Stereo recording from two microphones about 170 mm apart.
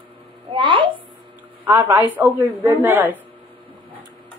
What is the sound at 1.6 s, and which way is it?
A woman's voice, 15° right (ahead or behind).